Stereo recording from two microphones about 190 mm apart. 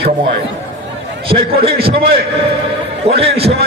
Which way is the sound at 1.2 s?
30° right (ahead or behind).